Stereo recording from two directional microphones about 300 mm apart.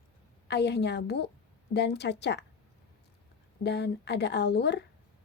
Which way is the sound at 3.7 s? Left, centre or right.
Left.